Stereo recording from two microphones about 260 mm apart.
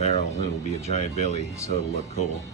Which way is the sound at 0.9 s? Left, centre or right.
Left.